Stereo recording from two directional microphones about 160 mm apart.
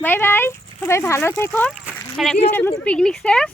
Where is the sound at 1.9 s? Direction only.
Centre (ahead or behind).